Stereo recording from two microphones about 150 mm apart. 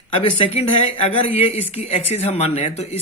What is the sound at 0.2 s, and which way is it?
Speech, 45° left (ahead or behind).